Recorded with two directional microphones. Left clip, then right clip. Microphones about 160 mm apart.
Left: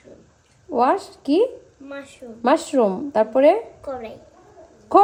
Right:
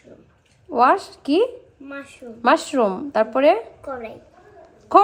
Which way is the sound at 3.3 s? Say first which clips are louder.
Left 2 dB; centre (ahead or behind).